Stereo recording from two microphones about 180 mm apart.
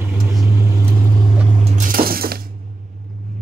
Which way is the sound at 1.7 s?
50° right (ahead or behind).